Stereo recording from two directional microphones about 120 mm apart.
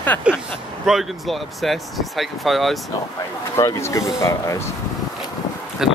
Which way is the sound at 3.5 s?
25° left (ahead or behind).